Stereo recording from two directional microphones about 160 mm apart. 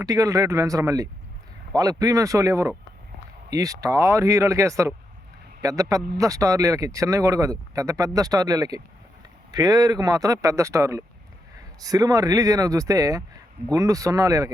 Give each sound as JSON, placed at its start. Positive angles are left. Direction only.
{"t": 0.0, "sound": "speech", "side_deg": -20}